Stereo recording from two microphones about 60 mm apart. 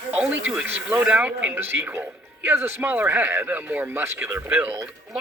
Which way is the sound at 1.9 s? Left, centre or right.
Right.